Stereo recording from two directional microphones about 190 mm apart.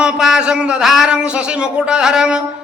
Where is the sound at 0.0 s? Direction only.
5° right (ahead or behind).